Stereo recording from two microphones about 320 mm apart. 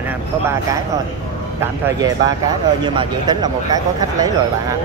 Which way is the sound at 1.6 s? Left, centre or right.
Centre.